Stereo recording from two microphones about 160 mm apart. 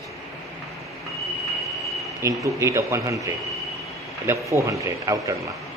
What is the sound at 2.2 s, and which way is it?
Speech, 20° right (ahead or behind).